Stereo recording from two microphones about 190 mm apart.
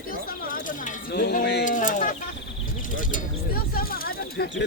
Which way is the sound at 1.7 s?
40° left (ahead or behind).